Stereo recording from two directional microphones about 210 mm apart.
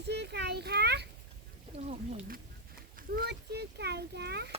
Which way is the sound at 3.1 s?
50° right (ahead or behind).